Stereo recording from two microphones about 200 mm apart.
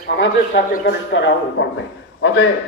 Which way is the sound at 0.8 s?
65° left (ahead or behind).